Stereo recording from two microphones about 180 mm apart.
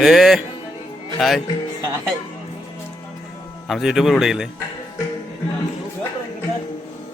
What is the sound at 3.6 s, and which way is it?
Speech, centre (ahead or behind).